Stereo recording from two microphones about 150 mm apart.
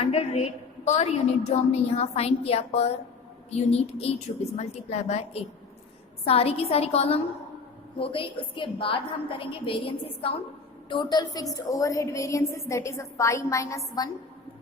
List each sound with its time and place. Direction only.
0.0 s a woman's voice: 40° left (ahead or behind); by 14.1 s 25° left (ahead or behind)